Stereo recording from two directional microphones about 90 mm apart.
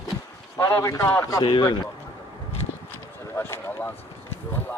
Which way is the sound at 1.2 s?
40° left (ahead or behind).